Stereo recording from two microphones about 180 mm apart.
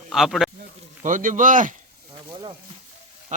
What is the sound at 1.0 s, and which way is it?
Speech, 45° right (ahead or behind).